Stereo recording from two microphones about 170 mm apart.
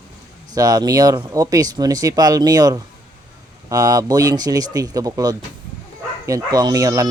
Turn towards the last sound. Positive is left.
turn(degrees=-20)  # may be behind; listen again after turning